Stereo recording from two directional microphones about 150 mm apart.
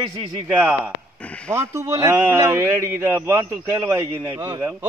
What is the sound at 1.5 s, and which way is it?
A man's voice, 20° right (ahead or behind).